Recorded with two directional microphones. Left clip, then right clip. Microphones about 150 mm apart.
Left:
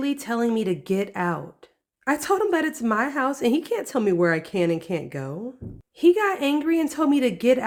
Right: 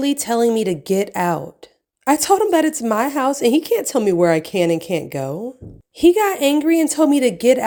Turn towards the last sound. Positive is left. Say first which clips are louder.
# right 6 dB
turn(degrees=-15)  # may be behind; listen again after turning